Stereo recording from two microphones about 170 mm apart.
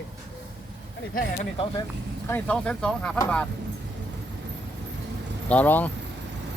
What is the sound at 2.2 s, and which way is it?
Speech, 10° left (ahead or behind).